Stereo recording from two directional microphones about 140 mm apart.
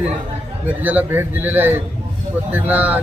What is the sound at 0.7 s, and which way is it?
Speech, 10° right (ahead or behind).